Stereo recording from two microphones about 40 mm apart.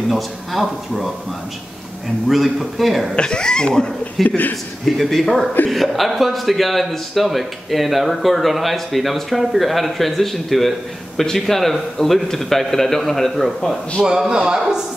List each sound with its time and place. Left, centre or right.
0.1 s a man's voice: centre
2.2 s a man's voice: centre
3.2 s speech: left
4.2 s a man's voice: centre
14.0 s a man's voice: centre